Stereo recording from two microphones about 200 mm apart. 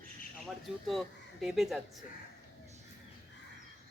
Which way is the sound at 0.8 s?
Centre (ahead or behind).